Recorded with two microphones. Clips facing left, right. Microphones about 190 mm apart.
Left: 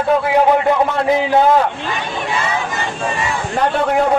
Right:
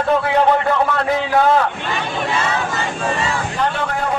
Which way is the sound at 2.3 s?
15° left (ahead or behind).